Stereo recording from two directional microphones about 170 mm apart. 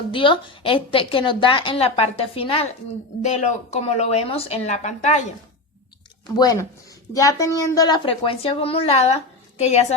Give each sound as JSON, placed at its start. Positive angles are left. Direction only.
{"t": 0.1, "sound": "a woman's voice", "side_deg": 30}
{"t": 6.3, "sound": "a woman's voice", "side_deg": 20}